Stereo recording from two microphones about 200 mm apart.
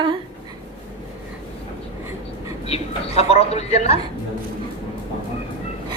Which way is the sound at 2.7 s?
30° left (ahead or behind).